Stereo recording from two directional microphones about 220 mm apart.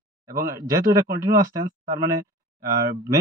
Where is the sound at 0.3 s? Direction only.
15° right (ahead or behind).